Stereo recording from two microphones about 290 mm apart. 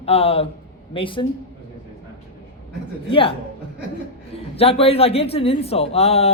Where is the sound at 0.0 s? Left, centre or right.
Left.